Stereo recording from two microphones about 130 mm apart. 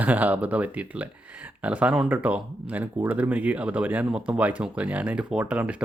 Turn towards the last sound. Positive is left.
turn(degrees=-10)  # may be behind; listen again after turning